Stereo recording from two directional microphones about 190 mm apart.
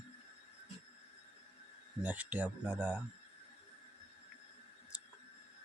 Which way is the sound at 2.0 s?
5° right (ahead or behind).